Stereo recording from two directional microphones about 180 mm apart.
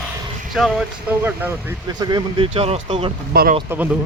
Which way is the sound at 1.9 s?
25° right (ahead or behind).